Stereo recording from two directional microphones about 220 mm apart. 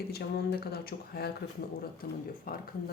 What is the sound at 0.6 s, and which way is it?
Speech, 45° left (ahead or behind).